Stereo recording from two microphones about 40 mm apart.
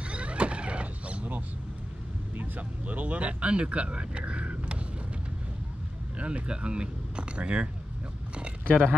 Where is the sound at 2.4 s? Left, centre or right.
Right.